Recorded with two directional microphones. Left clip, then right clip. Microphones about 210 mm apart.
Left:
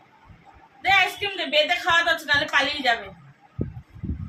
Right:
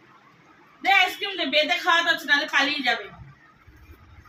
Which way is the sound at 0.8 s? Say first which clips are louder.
Even; 40° left (ahead or behind).